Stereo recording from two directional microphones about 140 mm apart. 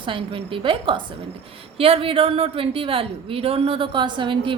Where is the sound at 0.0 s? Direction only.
40° right (ahead or behind).